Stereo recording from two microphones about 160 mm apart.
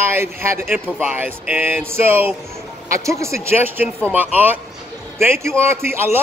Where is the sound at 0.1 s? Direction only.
15° right (ahead or behind).